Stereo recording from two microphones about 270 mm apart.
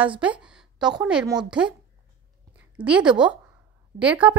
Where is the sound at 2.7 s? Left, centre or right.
Centre.